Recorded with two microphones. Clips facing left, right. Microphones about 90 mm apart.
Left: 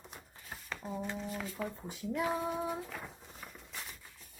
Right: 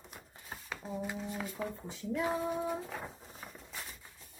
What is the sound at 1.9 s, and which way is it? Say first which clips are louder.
Speech: even; 10° left (ahead or behind).